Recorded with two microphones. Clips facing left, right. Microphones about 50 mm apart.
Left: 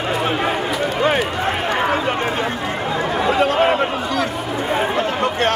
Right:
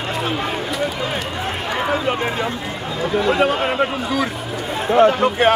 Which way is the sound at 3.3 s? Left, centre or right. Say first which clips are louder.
Left 4 dB; centre.